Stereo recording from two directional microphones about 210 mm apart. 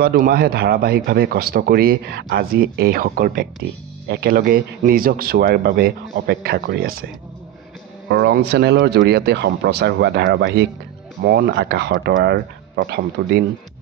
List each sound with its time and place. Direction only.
0.0 s speech: 45° right (ahead or behind)
8.1 s speech: 50° right (ahead or behind)